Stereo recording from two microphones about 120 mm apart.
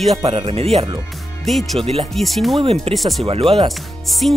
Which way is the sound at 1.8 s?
55° right (ahead or behind).